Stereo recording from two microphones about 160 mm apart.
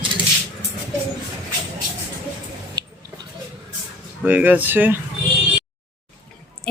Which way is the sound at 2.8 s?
25° right (ahead or behind).